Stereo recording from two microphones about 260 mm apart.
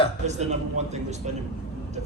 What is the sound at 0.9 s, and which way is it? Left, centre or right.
Speech, right.